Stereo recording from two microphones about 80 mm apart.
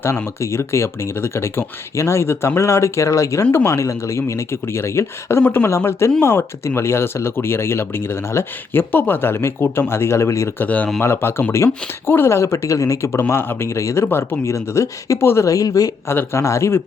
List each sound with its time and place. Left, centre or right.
0.0 s speech: left
10.6 s speech: centre
11.0 s speech: left
15.4 s speech: left
16.0 s speech: left